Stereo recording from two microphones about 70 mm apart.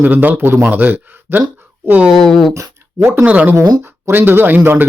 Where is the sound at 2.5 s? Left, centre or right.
Right.